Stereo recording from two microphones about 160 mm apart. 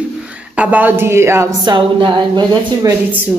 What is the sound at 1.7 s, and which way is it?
Speech, 30° right (ahead or behind).